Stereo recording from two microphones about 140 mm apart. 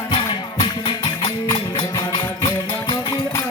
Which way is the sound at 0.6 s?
35° left (ahead or behind).